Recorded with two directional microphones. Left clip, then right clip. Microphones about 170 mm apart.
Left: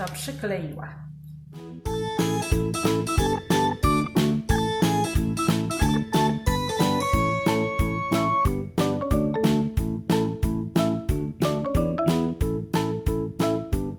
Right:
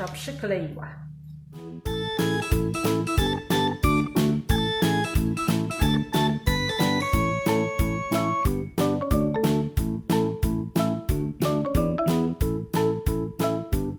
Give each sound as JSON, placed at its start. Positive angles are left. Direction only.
{"t": 0.4, "sound": "speech", "side_deg": -30}
{"t": 1.9, "sound": "music", "side_deg": 0}